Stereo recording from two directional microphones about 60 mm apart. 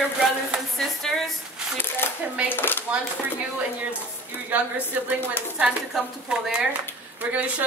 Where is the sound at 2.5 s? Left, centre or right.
Left.